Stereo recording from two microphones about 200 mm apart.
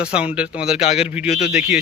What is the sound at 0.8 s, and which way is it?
Speech, 35° left (ahead or behind).